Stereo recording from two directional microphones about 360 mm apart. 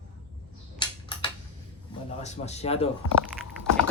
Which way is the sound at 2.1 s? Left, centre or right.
Centre.